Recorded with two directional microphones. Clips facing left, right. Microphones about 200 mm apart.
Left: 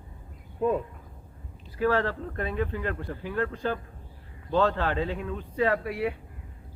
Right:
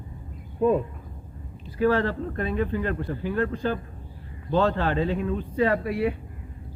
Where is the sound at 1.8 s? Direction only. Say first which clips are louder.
Right 3 dB; 15° right (ahead or behind).